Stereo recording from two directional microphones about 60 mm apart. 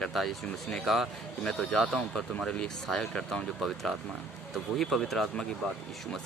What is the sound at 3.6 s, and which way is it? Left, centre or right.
Speech, centre.